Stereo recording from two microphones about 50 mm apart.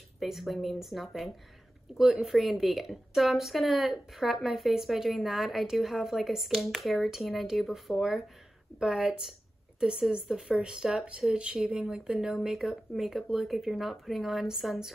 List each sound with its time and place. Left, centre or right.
0.2 s a woman's voice: centre